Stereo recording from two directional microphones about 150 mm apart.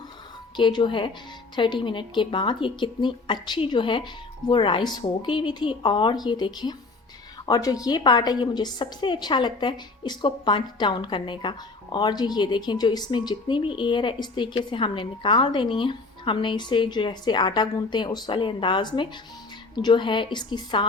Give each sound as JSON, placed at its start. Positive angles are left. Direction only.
{"t": 0.5, "sound": "a woman's voice", "side_deg": 30}